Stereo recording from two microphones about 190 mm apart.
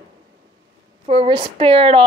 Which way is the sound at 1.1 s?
30° right (ahead or behind).